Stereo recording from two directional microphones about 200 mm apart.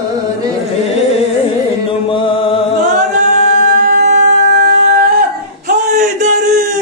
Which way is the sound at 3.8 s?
45° right (ahead or behind).